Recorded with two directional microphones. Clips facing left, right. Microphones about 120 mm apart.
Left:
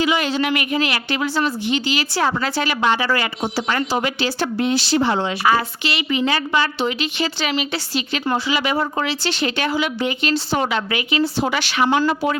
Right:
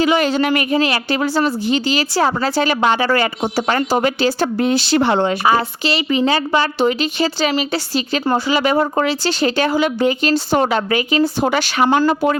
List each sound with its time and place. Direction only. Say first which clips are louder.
0.0 s speech: right 4 dB; 45° right (ahead or behind); by 5.4 s 60° right (ahead or behind)
5.5 s speech: right 3 dB; 35° right (ahead or behind)